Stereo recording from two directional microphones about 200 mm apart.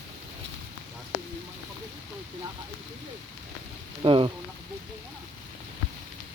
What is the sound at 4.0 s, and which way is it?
Speech, 25° right (ahead or behind).